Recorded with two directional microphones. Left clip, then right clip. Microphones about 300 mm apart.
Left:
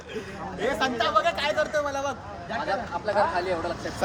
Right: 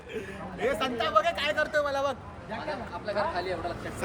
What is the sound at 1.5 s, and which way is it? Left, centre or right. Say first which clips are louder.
Speech: left 2 dB; centre.